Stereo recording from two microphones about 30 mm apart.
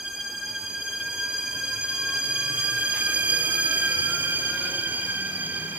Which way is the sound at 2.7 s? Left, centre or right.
Right.